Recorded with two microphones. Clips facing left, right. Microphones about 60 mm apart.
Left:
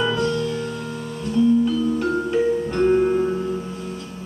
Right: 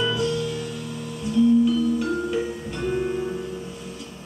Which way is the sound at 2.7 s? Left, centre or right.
Left.